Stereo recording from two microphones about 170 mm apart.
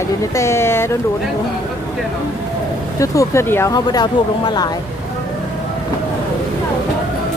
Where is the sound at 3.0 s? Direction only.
15° left (ahead or behind).